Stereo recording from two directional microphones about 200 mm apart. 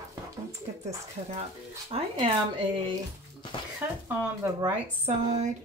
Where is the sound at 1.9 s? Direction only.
25° right (ahead or behind).